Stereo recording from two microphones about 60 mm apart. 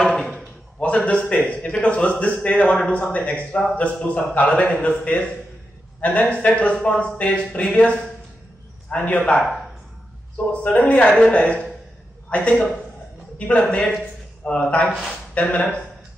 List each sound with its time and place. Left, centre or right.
0.0 s drawer open or close: centre
0.7 s speech: left
9.4 s speech: centre
10.3 s speech: left